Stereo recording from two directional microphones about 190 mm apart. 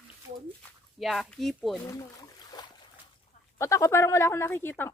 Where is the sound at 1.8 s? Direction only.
15° left (ahead or behind).